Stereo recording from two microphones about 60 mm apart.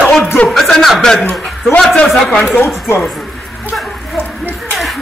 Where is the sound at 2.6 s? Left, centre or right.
Left.